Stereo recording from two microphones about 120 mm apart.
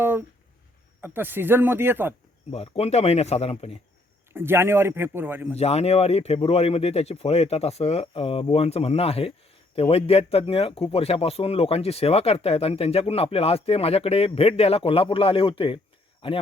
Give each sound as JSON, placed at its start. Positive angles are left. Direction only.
{"t": 0.0, "sound": "speech", "side_deg": -15}
{"t": 2.5, "sound": "speech", "side_deg": 55}
{"t": 4.3, "sound": "a man's voice", "side_deg": -20}
{"t": 5.5, "sound": "speech", "side_deg": 60}